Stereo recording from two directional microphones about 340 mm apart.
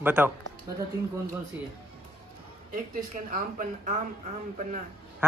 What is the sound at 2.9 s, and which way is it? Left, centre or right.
Speech, right.